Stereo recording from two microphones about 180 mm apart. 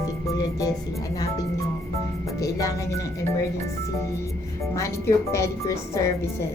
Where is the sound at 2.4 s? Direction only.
20° left (ahead or behind).